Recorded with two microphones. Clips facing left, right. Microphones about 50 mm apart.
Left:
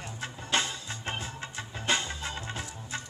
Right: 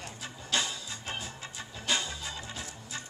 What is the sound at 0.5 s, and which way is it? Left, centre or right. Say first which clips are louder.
Music: left 2 dB; left.